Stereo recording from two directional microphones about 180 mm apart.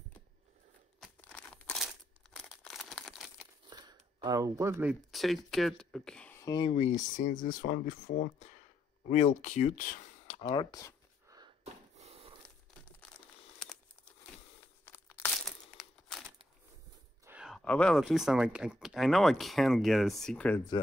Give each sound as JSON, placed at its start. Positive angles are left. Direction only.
{"t": 1.0, "sound": "crumpling", "side_deg": 5}
{"t": 3.6, "sound": "a sound", "side_deg": -25}
{"t": 5.1, "sound": "speech", "side_deg": 0}
{"t": 6.4, "sound": "speech", "side_deg": 25}
{"t": 6.7, "sound": "speech", "side_deg": 40}
{"t": 10.4, "sound": "speech", "side_deg": 25}
{"t": 11.2, "sound": "a sound", "side_deg": -20}
{"t": 11.6, "sound": "a sound", "side_deg": -35}
{"t": 13.6, "sound": "crumpling", "side_deg": 5}
{"t": 14.9, "sound": "crumpling", "side_deg": 10}
{"t": 15.4, "sound": "crumpling", "side_deg": 0}
{"t": 17.2, "sound": "a sound", "side_deg": -10}
{"t": 17.5, "sound": "speech", "side_deg": 5}